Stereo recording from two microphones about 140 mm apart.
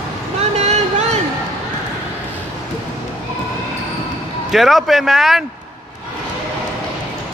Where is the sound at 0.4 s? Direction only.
50° right (ahead or behind).